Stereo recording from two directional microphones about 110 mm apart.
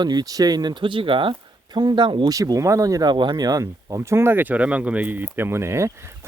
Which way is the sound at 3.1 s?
45° right (ahead or behind).